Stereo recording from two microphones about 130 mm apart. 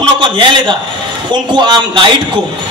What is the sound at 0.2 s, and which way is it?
A man's voice, 40° right (ahead or behind).